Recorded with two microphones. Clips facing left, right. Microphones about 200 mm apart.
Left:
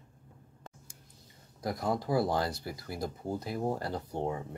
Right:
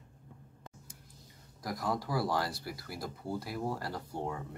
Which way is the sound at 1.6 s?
25° left (ahead or behind).